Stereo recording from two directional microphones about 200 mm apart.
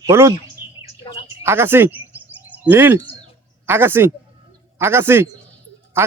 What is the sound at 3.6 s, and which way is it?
Speech, 10° right (ahead or behind).